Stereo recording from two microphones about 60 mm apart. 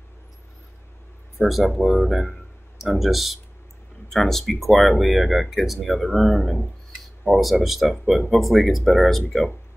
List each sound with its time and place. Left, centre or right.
1.4 s speech: centre